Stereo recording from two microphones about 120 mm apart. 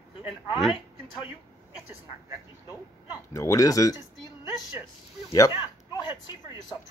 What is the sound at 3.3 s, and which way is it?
Speech, 25° left (ahead or behind).